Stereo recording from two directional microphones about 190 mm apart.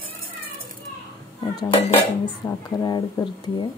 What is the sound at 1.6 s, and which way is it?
Dishes, 30° left (ahead or behind).